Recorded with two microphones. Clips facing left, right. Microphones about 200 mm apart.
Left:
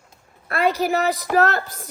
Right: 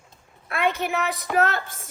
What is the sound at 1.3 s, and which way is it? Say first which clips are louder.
Speech: left 2 dB; 35° left (ahead or behind).